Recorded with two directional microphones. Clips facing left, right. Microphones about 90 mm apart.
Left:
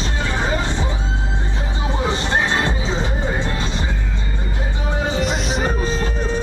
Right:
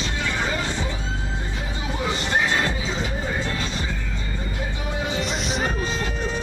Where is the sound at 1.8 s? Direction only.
30° left (ahead or behind).